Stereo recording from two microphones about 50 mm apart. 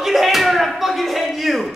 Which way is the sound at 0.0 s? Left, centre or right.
Centre.